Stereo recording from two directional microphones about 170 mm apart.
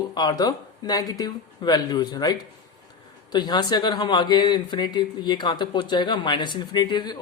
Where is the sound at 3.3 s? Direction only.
25° left (ahead or behind).